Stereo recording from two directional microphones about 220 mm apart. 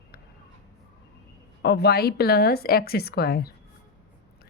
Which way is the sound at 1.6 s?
50° left (ahead or behind).